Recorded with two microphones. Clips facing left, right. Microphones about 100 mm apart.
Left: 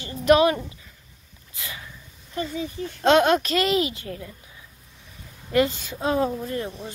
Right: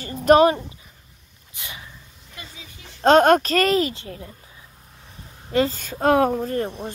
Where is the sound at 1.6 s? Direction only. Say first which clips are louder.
Left 1 dB; 20° right (ahead or behind).